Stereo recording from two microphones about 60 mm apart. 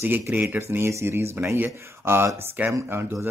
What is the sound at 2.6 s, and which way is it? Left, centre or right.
Speech, right.